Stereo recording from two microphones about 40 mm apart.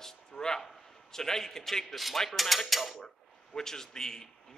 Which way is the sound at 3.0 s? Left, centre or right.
Centre.